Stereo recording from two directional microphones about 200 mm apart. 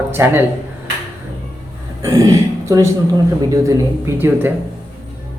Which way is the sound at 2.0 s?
15° right (ahead or behind).